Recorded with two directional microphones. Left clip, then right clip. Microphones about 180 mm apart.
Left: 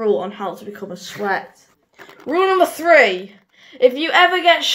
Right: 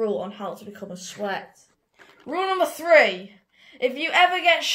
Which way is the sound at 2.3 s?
25° right (ahead or behind).